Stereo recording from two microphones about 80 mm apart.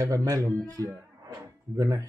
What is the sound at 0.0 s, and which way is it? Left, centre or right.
Speech, right.